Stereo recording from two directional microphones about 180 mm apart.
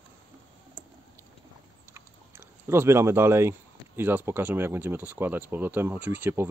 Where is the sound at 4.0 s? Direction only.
10° right (ahead or behind).